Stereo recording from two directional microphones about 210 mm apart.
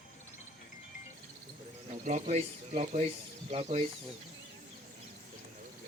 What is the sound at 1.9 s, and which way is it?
Speech, 35° right (ahead or behind).